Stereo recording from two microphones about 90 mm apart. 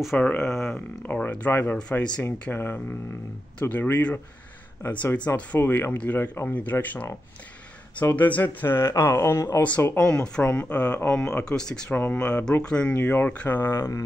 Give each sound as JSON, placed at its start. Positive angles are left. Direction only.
{"t": 0.2, "sound": "speech", "side_deg": 10}
{"t": 1.0, "sound": "speech", "side_deg": 15}
{"t": 2.5, "sound": "speech", "side_deg": 20}
{"t": 9.6, "sound": "speech", "side_deg": 15}